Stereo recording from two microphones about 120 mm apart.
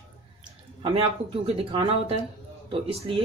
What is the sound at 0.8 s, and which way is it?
Speech, 50° right (ahead or behind).